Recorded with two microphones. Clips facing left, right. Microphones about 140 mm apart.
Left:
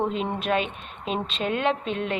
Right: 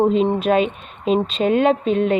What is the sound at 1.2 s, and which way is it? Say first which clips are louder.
Speech: right 7 dB; 45° right (ahead or behind).